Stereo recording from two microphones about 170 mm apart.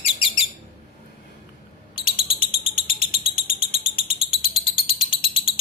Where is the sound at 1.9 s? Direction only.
30° left (ahead or behind).